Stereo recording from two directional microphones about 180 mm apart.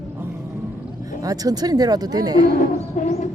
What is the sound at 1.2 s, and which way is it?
Speech, 20° right (ahead or behind).